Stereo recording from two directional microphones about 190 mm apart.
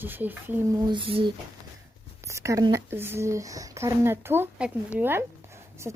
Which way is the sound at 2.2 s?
15° right (ahead or behind).